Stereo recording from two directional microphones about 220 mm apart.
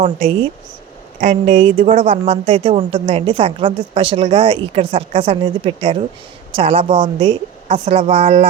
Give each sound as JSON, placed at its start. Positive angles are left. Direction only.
{"t": 0.0, "sound": "a woman's voice", "side_deg": -25}
{"t": 1.7, "sound": "a woman's voice", "side_deg": -40}
{"t": 2.0, "sound": "a woman's voice", "side_deg": -25}